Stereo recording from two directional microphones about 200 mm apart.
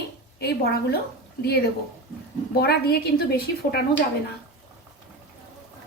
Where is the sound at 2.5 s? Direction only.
50° left (ahead or behind).